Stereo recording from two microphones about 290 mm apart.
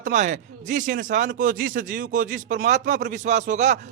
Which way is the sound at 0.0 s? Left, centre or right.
Right.